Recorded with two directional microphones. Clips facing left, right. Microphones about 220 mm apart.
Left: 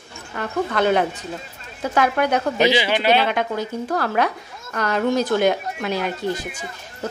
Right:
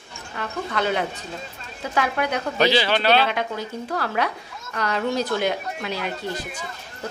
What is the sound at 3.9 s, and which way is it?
A woman's voice, 45° left (ahead or behind).